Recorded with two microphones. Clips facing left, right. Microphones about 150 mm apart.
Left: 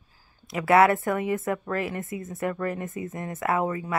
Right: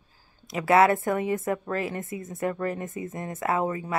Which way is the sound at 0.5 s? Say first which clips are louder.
Left 1 dB; 25° right (ahead or behind).